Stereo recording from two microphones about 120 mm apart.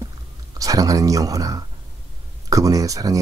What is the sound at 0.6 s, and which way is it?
Speech, 30° right (ahead or behind).